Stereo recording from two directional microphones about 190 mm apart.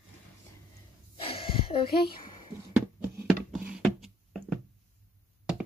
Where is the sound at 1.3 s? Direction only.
30° left (ahead or behind).